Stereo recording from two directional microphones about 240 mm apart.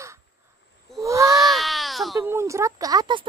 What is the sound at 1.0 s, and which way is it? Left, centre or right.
Speech, centre.